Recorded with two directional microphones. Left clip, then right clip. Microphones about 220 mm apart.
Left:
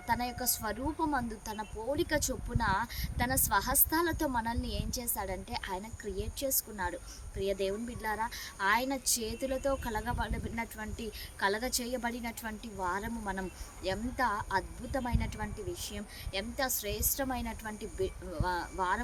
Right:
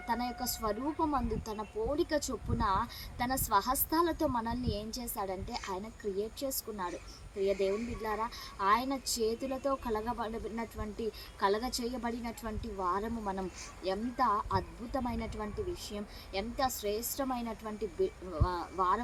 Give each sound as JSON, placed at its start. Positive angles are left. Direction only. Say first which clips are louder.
{"t": 0.1, "sound": "speech", "louder": "left 2 dB", "side_deg": 5}
{"t": 4.7, "sound": "a woman's voice", "louder": "even", "side_deg": 20}
{"t": 5.1, "sound": "speech", "louder": "right 2 dB", "side_deg": 0}